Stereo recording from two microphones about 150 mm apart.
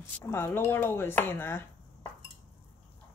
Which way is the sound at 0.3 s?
15° left (ahead or behind).